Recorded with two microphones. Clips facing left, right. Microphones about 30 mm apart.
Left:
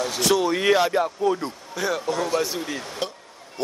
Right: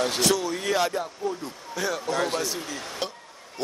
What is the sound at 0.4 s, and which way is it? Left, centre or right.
Speech, left.